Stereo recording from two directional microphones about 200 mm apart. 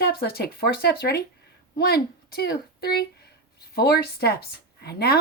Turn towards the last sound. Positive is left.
turn(degrees=50)  # may be behind; listen again after turning